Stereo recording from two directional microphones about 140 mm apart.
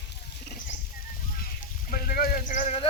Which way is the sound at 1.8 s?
90° left.